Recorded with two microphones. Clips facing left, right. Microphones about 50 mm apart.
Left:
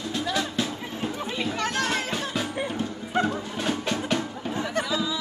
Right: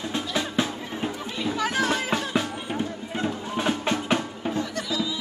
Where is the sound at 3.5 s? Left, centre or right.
Right.